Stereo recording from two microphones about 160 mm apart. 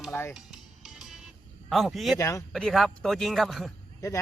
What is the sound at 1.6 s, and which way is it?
Speech, centre (ahead or behind).